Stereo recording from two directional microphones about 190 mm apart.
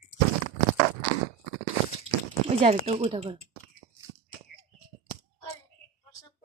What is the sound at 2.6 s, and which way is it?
Speech, 30° right (ahead or behind).